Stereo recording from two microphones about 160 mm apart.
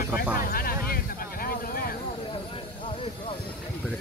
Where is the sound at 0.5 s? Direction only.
65° left (ahead or behind).